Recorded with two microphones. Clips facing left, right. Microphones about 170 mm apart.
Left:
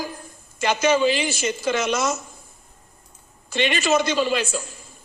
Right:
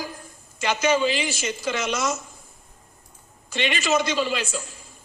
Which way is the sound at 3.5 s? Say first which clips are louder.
Left 3 dB; 45° left (ahead or behind).